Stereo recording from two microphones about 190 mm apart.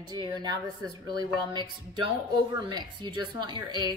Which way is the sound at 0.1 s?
20° right (ahead or behind).